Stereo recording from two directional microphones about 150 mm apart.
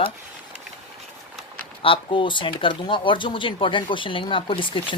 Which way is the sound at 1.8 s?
35° left (ahead or behind).